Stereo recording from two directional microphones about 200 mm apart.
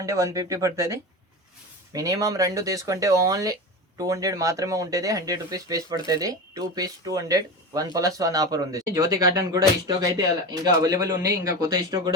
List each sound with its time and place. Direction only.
0.0 s speech: 15° right (ahead or behind)